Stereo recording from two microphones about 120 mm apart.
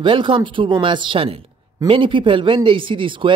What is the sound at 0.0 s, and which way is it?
Speech, 45° right (ahead or behind).